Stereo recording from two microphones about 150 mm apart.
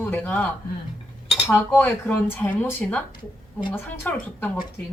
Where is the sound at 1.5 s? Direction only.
10° left (ahead or behind).